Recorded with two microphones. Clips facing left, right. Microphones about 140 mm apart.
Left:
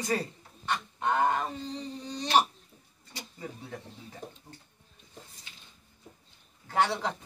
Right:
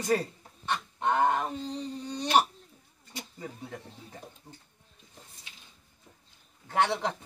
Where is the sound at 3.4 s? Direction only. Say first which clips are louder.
Left 1 dB; centre (ahead or behind).